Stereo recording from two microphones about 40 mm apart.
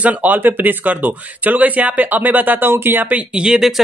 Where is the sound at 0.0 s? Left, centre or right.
Right.